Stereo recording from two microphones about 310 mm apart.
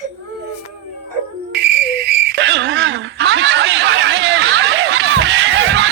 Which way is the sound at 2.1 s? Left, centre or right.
Right.